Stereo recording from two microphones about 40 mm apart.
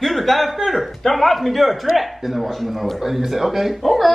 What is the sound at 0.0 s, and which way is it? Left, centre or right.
A man's voice, centre.